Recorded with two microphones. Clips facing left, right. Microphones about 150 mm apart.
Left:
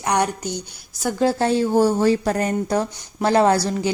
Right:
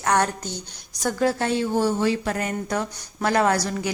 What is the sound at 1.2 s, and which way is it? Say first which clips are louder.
Speech: left 4 dB; 35° left (ahead or behind).